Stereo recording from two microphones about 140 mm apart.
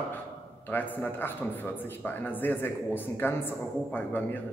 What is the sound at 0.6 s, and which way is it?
A man's voice, 15° left (ahead or behind).